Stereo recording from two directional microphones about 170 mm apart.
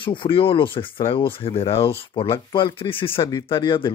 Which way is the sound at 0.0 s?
30° left (ahead or behind).